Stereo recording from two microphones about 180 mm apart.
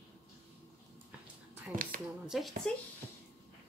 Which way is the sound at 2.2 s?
Centre (ahead or behind).